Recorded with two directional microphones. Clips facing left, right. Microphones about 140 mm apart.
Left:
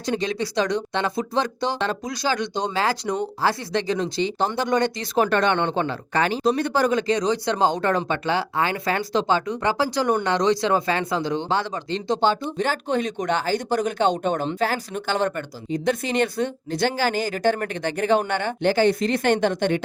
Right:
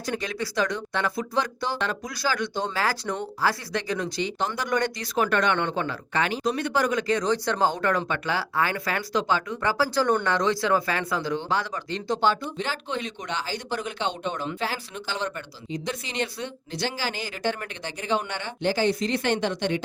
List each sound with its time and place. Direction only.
0.0 s speech: 25° left (ahead or behind)
7.2 s speech: 15° left (ahead or behind)
12.5 s speech: 45° left (ahead or behind)